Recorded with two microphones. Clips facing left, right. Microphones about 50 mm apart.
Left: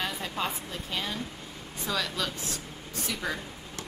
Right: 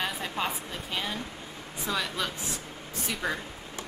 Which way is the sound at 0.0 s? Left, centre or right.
Centre.